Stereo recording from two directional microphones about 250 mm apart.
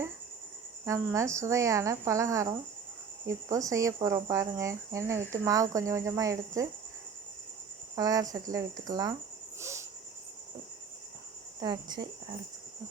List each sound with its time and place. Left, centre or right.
0.9 s speech: centre
7.9 s speech: centre
9.6 s cricket: centre
11.6 s speech: centre